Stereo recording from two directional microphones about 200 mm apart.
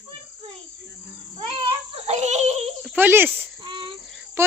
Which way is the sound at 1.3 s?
25° right (ahead or behind).